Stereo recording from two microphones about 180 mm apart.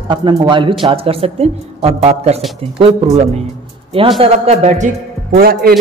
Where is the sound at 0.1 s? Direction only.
25° right (ahead or behind).